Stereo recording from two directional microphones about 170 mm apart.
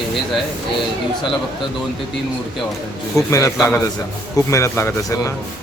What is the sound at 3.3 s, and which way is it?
A man's voice, 20° left (ahead or behind).